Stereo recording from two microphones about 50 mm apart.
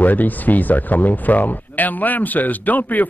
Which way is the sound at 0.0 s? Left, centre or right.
Left.